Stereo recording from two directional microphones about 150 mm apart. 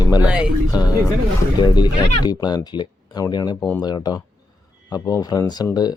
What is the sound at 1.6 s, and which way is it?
Speech, 30° left (ahead or behind).